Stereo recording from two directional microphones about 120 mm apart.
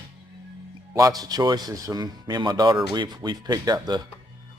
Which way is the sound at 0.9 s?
30° right (ahead or behind).